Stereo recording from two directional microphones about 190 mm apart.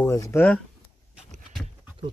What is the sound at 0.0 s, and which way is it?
Speech, 15° left (ahead or behind).